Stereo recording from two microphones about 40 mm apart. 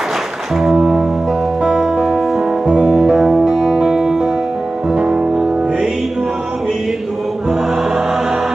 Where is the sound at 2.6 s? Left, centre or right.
Right.